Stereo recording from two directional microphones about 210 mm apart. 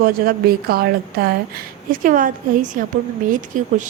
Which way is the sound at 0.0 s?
45° right (ahead or behind).